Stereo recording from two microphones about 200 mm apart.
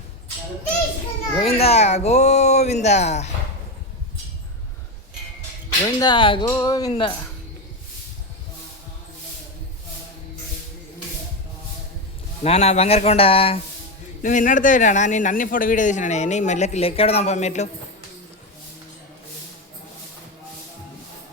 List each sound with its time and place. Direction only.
1.4 s a man's voice: 30° left (ahead or behind)
6.0 s speech: 20° left (ahead or behind)
12.4 s a man's voice: 30° left (ahead or behind)
14.2 s a man's voice: 40° left (ahead or behind)